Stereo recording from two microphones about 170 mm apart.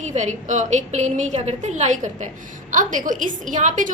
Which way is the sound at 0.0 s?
45° right (ahead or behind).